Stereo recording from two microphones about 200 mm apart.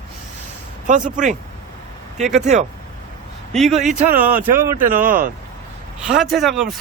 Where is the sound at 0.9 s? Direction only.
40° right (ahead or behind).